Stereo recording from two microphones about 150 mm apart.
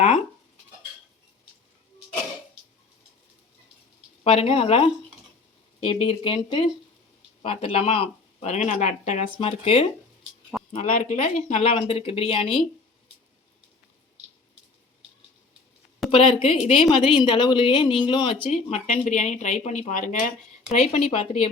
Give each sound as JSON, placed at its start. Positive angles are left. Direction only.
{"t": 4.2, "sound": "speech", "side_deg": 40}
{"t": 10.5, "sound": "a sound", "side_deg": -5}
{"t": 11.0, "sound": "speech", "side_deg": 50}
{"t": 16.1, "sound": "speech", "side_deg": 40}
{"t": 20.7, "sound": "speech", "side_deg": 45}